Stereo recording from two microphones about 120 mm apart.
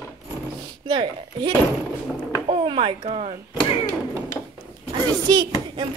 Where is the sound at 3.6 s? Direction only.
50° left (ahead or behind).